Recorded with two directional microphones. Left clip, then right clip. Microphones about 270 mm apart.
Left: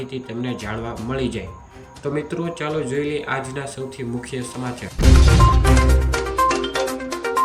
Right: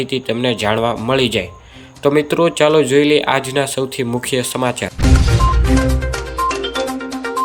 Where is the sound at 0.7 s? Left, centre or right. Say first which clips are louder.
Right 12 dB; centre.